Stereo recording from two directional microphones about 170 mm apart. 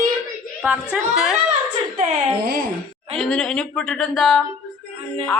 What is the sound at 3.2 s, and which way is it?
A man's voice, 5° left (ahead or behind).